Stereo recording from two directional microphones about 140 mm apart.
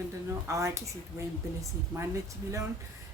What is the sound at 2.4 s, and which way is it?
Speech, 20° right (ahead or behind).